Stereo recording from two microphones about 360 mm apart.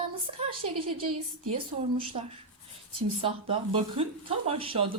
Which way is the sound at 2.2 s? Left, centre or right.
Centre.